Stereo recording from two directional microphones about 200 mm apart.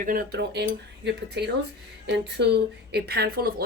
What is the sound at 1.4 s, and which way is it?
Speech, 60° right (ahead or behind).